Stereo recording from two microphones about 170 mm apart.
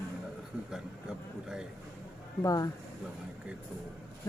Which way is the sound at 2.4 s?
20° left (ahead or behind).